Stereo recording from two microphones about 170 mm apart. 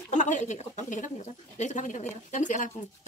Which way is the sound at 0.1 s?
45° left (ahead or behind).